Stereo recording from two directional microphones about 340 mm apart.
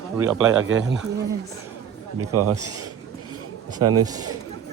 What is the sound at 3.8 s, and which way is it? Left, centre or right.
Speech, right.